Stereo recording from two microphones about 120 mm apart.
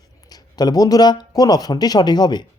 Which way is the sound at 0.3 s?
35° left (ahead or behind).